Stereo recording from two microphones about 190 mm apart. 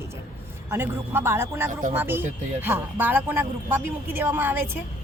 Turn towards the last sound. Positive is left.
turn(degrees=-10)  # may be behind; listen again after turning